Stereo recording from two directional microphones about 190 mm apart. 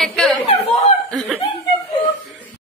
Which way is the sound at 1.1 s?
5° left (ahead or behind).